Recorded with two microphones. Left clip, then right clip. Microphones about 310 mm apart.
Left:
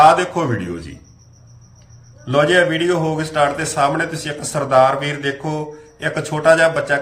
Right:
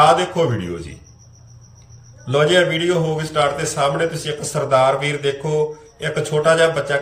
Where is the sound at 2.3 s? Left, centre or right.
Centre.